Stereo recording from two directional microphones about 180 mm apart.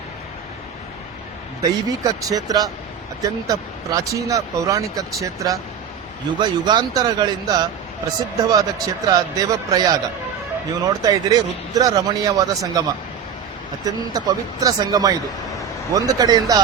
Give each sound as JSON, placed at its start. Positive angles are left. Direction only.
{"t": 1.6, "sound": "speech", "side_deg": -20}
{"t": 13.8, "sound": "speech", "side_deg": -20}